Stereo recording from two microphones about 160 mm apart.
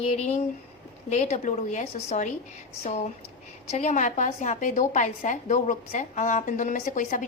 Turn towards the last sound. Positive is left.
turn(degrees=55)  # may be behind; listen again after turning